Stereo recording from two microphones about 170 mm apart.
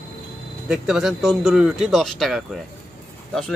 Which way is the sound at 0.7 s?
5° right (ahead or behind).